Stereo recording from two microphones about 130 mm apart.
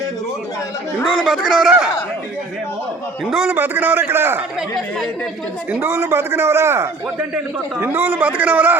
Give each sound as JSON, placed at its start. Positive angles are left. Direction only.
{"t": 1.2, "sound": "a man's voice", "side_deg": 0}
{"t": 3.2, "sound": "a man's voice", "side_deg": 0}
{"t": 3.5, "sound": "a man's voice", "side_deg": -15}
{"t": 5.7, "sound": "a man's voice", "side_deg": -15}